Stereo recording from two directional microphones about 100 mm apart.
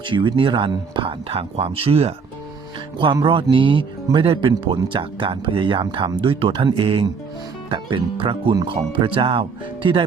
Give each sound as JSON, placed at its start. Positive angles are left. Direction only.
{"t": 0.0, "sound": "speech", "side_deg": -55}
{"t": 1.3, "sound": "speech", "side_deg": -80}
{"t": 3.5, "sound": "speech", "side_deg": -55}